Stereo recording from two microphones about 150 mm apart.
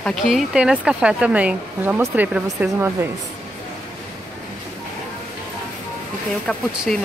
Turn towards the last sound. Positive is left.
turn(degrees=5)  # may be behind; listen again after turning